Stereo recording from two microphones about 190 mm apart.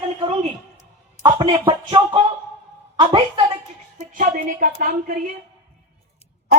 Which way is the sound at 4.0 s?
45° right (ahead or behind).